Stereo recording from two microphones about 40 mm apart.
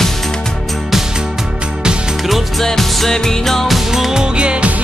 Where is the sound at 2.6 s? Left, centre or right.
Centre.